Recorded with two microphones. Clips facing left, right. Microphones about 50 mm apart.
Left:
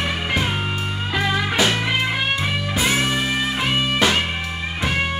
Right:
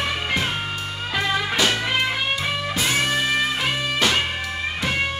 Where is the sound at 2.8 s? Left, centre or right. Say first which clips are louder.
Left 3 dB; centre.